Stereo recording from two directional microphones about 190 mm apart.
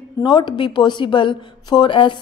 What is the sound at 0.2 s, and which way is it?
A woman's voice, 25° left (ahead or behind).